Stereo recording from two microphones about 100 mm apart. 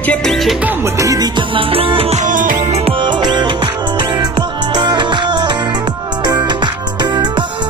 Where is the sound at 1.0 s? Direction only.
35° right (ahead or behind).